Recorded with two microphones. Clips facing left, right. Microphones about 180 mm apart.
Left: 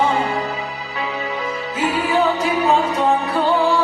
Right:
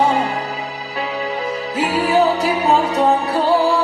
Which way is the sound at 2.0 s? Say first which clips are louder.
Right 4 dB; 40° right (ahead or behind).